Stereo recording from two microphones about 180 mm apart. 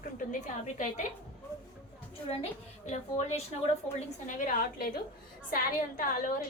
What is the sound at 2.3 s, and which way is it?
A woman's voice, 35° left (ahead or behind).